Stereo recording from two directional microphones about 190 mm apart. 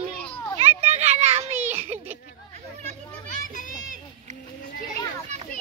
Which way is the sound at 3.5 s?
45° left (ahead or behind).